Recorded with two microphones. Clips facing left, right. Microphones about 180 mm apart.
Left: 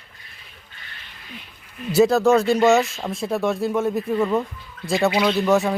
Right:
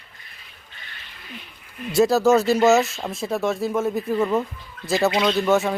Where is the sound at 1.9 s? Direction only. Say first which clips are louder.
Left 1 dB; centre (ahead or behind).